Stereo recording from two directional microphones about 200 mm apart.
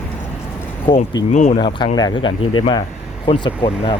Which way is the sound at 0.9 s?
30° left (ahead or behind).